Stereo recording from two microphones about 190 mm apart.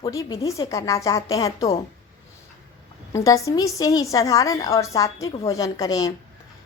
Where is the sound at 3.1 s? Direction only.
15° left (ahead or behind).